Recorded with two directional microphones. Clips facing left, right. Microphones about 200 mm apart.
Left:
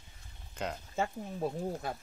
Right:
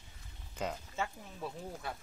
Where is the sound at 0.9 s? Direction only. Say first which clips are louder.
Left 5 dB; 35° left (ahead or behind).